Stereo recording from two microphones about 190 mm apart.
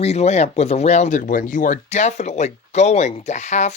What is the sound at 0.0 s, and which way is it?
Speech, 35° left (ahead or behind).